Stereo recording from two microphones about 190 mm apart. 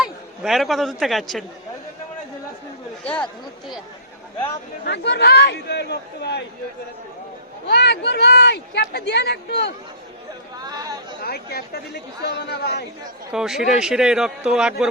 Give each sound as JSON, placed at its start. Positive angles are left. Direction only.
{"t": 0.0, "sound": "speech", "side_deg": 0}
{"t": 3.0, "sound": "speech", "side_deg": 5}
{"t": 4.9, "sound": "speech", "side_deg": 65}
{"t": 7.7, "sound": "speech", "side_deg": 60}
{"t": 10.6, "sound": "chatter", "side_deg": -20}
{"t": 11.2, "sound": "speech", "side_deg": 55}
{"t": 13.3, "sound": "a man's voice", "side_deg": 0}